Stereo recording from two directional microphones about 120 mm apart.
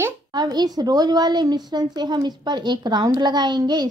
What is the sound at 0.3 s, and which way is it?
Speech, 35° right (ahead or behind).